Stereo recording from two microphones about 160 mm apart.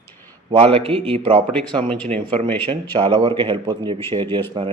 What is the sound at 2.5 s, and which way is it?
Speech, 35° right (ahead or behind).